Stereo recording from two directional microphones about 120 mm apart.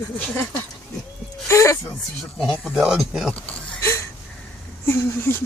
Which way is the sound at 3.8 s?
25° left (ahead or behind).